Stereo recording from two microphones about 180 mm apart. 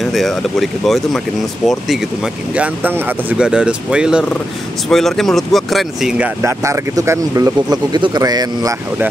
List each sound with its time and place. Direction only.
0.0 s speech: centre (ahead or behind); by 8.7 s 20° right (ahead or behind)